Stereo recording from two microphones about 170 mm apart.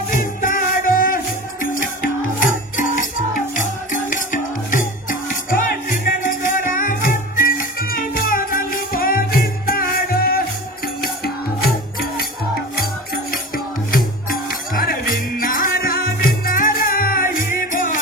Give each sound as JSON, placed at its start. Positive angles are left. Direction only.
{"t": 0.1, "sound": "music", "side_deg": 50}
{"t": 14.7, "sound": "music", "side_deg": 55}